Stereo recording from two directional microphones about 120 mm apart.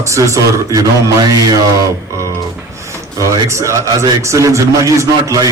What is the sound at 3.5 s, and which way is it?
A man's voice, 25° right (ahead or behind).